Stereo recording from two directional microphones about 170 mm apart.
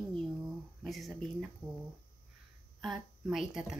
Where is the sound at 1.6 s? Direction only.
25° right (ahead or behind).